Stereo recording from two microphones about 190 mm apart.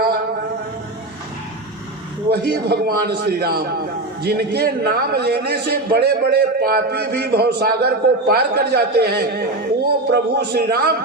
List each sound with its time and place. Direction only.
2.3 s a man's voice: 60° right (ahead or behind)